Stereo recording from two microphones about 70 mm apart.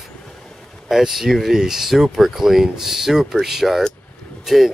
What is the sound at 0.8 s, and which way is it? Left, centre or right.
Speech, centre.